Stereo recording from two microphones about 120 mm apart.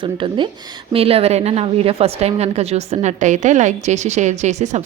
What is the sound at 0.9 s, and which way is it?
A woman's voice, 55° right (ahead or behind).